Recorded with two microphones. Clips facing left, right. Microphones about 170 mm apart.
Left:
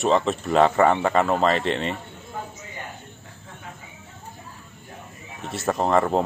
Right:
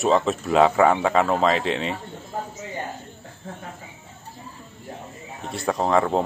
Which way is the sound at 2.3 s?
35° right (ahead or behind).